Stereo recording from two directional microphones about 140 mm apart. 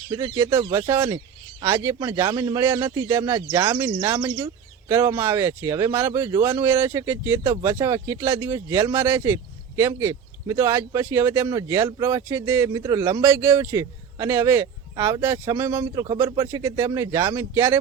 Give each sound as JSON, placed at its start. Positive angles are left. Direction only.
{"t": 0.1, "sound": "speech", "side_deg": -25}
{"t": 13.2, "sound": "speech", "side_deg": -15}